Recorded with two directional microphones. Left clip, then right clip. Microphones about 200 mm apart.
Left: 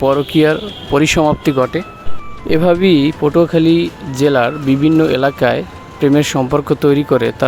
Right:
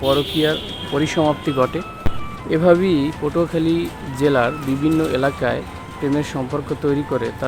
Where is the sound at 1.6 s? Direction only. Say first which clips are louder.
Left 3 dB; 20° left (ahead or behind).